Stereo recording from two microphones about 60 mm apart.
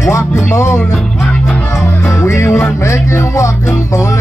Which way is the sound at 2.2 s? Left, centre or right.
Left.